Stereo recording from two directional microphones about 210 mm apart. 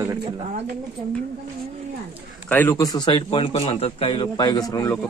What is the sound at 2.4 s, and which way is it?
A man's voice, 10° left (ahead or behind).